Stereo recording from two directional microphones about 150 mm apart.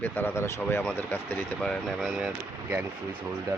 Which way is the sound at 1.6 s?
5° left (ahead or behind).